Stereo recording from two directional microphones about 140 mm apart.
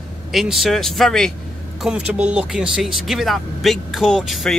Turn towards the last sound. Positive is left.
turn(degrees=0)  # may be behind; listen again after turning